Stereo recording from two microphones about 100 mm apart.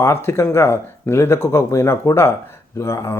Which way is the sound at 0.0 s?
25° left (ahead or behind).